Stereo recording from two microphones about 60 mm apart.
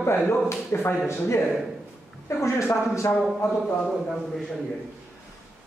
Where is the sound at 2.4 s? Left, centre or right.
Left.